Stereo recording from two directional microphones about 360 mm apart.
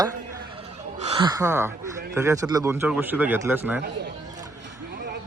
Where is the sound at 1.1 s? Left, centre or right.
Centre.